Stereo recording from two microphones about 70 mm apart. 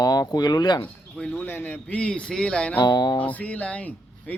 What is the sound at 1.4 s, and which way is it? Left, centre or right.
Speech, left.